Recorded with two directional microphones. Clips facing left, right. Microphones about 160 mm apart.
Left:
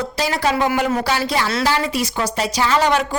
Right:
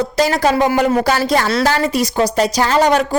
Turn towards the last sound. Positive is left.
turn(degrees=-40)  # may be behind; listen again after turning